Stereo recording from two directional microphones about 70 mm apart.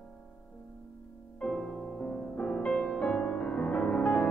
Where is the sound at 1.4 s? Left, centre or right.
Centre.